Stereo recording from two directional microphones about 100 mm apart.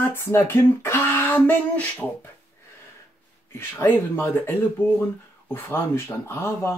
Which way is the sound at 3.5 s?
25° left (ahead or behind).